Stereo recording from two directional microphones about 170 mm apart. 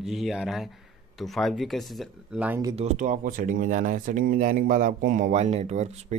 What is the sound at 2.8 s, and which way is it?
Speech, 45° right (ahead or behind).